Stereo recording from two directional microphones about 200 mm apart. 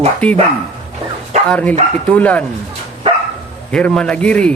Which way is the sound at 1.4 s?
5° left (ahead or behind).